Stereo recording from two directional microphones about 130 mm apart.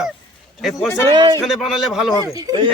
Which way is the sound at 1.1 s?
35° right (ahead or behind).